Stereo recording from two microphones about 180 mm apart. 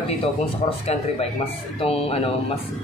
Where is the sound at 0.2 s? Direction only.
30° left (ahead or behind).